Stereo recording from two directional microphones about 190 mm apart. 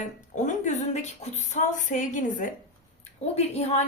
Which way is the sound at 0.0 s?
40° left (ahead or behind).